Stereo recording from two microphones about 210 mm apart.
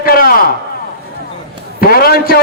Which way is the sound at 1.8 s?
45° left (ahead or behind).